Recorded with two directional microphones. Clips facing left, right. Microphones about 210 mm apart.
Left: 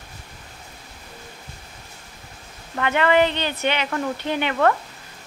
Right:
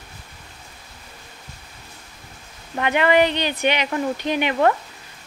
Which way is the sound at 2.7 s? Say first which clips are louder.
Right 1 dB; 15° right (ahead or behind).